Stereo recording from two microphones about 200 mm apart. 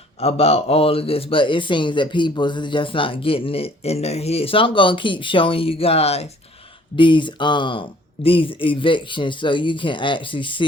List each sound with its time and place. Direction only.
0.2 s speech: 30° left (ahead or behind)